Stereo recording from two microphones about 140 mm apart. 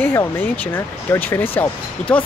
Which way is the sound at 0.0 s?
15° left (ahead or behind).